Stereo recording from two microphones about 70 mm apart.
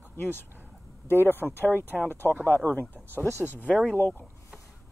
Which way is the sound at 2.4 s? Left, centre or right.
Left.